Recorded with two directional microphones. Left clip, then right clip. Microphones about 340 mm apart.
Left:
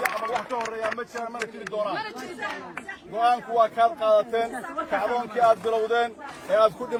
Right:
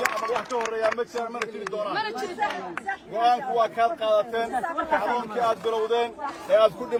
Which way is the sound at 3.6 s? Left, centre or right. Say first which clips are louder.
Left 2 dB; centre.